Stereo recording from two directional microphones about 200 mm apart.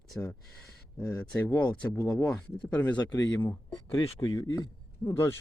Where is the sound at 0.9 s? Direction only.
5° left (ahead or behind).